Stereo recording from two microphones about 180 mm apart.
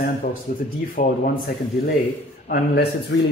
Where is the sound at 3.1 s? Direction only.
90° left.